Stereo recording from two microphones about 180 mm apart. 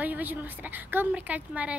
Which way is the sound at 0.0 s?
10° right (ahead or behind).